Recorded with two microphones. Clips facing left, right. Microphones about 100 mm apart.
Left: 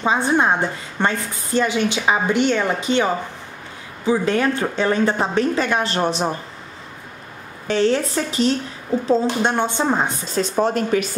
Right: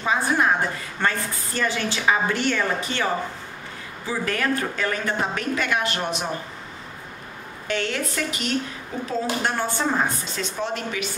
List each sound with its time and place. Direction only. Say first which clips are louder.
0.0 s a woman's voice: left 4 dB; 25° left (ahead or behind)
7.6 s a woman's voice: left 8 dB; 30° left (ahead or behind)
10.3 s speech: left 9 dB; 40° left (ahead or behind)